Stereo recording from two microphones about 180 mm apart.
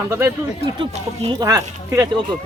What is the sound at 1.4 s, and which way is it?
Speech, 15° right (ahead or behind).